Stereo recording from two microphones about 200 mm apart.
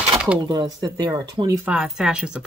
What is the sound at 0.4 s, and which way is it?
Speech, 20° right (ahead or behind).